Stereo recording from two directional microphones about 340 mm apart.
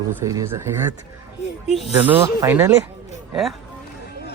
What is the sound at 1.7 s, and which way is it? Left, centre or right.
Speech, centre.